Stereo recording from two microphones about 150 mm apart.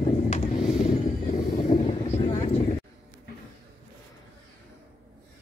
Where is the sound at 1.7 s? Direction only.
45° left (ahead or behind).